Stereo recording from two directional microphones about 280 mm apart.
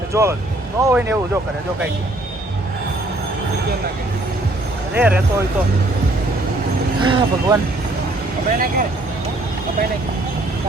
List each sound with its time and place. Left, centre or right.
0.1 s speech: centre
4.9 s speech: centre
7.0 s speech: centre
8.4 s speech: right